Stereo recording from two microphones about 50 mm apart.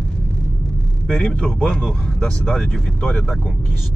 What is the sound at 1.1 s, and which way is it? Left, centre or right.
Speech, centre.